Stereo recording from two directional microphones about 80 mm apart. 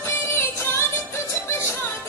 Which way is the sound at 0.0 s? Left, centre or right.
Left.